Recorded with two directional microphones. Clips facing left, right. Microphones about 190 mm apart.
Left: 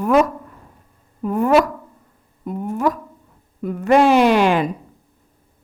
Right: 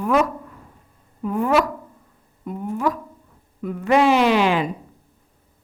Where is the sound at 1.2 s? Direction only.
45° left (ahead or behind).